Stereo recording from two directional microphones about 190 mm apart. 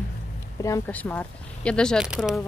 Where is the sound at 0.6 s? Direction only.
15° left (ahead or behind); by 2.4 s centre (ahead or behind).